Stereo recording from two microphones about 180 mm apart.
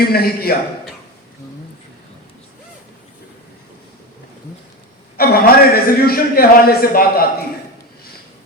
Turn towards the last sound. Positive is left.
turn(degrees=55)  # may be behind; listen again after turning